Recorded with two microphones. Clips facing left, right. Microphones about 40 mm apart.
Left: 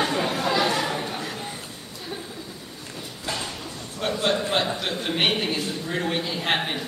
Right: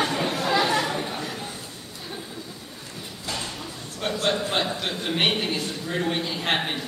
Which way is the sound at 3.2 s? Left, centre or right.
Centre.